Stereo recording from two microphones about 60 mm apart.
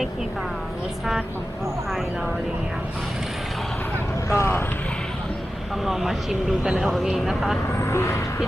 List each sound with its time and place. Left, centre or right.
4.3 s speech: left
5.8 s speech: centre
7.8 s speech: left